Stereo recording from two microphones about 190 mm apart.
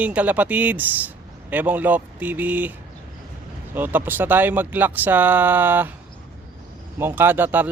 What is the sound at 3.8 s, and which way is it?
Speech, 10° right (ahead or behind).